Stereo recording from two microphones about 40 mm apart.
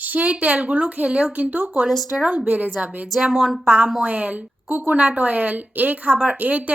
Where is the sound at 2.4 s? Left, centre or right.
Right.